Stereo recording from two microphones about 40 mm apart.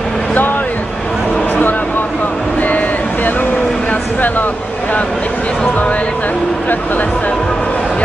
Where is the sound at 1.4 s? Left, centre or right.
Left.